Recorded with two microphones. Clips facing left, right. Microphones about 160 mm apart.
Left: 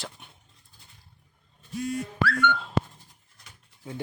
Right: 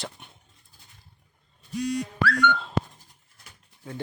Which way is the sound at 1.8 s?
80° right.